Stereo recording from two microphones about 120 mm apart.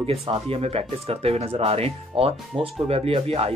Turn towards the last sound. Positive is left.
turn(degrees=-55)  # may be behind; listen again after turning